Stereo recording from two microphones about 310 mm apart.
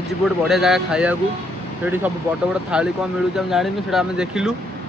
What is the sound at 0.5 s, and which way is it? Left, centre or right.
Speech, centre.